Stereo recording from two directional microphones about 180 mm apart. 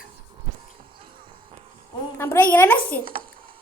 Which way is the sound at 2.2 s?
10° left (ahead or behind).